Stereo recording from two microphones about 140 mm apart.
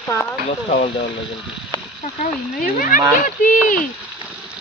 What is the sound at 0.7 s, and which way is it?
Speech, 50° left (ahead or behind).